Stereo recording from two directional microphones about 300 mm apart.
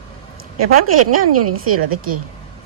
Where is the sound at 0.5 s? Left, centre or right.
Right.